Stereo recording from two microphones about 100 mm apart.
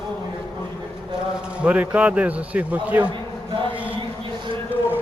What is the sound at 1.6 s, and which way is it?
Speech, 15° right (ahead or behind).